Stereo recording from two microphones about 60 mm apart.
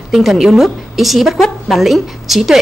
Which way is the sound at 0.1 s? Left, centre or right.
Centre.